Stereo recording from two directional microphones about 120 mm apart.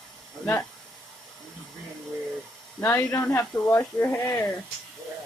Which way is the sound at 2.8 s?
20° left (ahead or behind).